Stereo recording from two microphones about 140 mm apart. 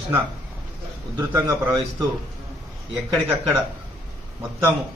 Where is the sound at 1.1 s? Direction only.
20° right (ahead or behind).